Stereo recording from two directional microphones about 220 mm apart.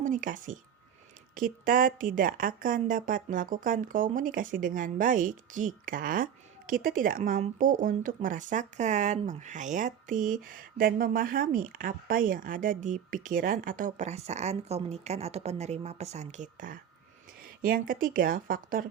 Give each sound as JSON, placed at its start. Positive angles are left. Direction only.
{"t": 0.0, "sound": "speech", "side_deg": -35}